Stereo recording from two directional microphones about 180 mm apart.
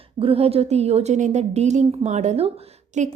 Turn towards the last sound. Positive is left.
turn(degrees=-40)  # may be behind; listen again after turning